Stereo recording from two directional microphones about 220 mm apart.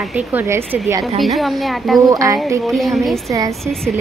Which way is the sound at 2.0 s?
15° right (ahead or behind).